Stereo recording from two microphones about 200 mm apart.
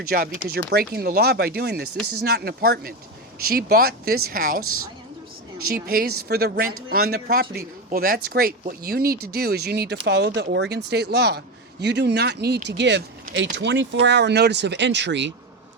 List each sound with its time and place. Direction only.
0.1 s speech: 50° right (ahead or behind)
4.6 s a woman's voice: 90° right
5.6 s speech: 45° right (ahead or behind)